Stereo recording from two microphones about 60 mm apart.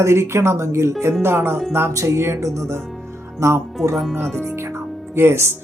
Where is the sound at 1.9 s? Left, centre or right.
Right.